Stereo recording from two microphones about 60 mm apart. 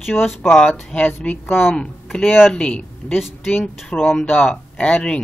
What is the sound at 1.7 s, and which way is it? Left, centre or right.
A man's voice, centre.